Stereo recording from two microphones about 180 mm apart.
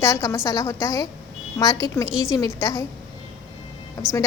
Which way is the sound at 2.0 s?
5° right (ahead or behind).